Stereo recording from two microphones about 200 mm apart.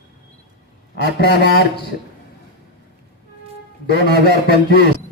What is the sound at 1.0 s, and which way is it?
Speech, 60° left (ahead or behind).